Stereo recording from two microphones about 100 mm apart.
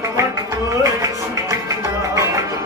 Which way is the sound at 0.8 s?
35° right (ahead or behind).